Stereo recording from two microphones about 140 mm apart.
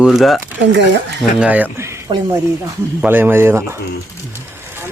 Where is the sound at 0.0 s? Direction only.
Centre (ahead or behind).